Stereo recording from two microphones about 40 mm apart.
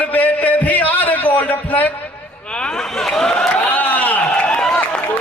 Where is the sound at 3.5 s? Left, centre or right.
Left.